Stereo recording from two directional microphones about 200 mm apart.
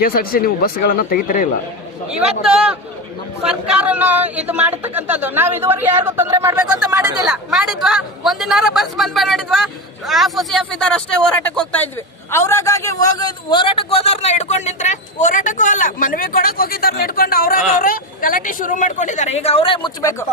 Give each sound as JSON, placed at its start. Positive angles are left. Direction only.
{"t": 0.0, "sound": "speech", "side_deg": 50}
{"t": 2.0, "sound": "a man's voice", "side_deg": 0}
{"t": 7.3, "sound": "a man's voice", "side_deg": 0}